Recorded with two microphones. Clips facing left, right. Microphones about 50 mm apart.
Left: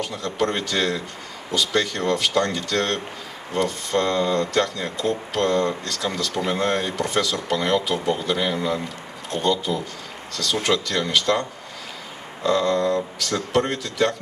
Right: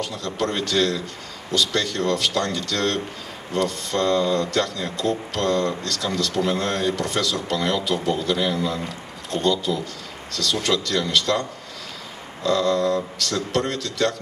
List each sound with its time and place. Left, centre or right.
0.0 s speech: centre
12.4 s speech: centre